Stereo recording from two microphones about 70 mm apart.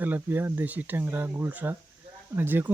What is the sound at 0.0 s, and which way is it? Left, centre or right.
Speech, right.